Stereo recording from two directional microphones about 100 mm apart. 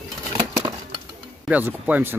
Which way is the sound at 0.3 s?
30° right (ahead or behind).